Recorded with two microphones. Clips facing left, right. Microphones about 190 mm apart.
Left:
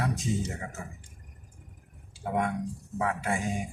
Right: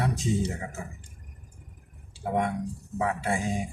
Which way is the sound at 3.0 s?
30° right (ahead or behind).